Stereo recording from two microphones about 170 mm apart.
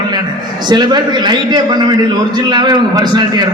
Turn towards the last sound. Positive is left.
turn(degrees=-25)  # may be behind; listen again after turning